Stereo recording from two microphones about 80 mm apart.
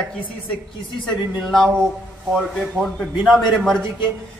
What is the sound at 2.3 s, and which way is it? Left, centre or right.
A man's voice, centre.